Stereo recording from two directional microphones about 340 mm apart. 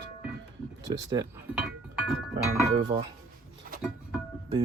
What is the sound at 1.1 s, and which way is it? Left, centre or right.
Speech, centre.